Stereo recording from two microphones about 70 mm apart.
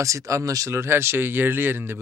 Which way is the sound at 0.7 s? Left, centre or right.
Right.